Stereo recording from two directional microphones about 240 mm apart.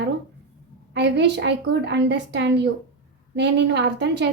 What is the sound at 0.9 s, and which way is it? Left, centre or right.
A woman's voice, right.